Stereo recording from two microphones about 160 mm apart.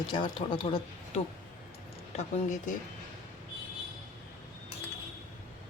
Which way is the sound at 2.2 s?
45° left (ahead or behind).